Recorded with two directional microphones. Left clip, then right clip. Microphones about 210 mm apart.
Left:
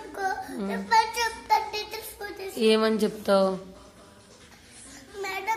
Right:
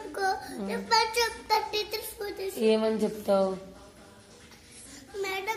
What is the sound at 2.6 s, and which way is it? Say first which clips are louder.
Speech: left 3 dB; 25° left (ahead or behind).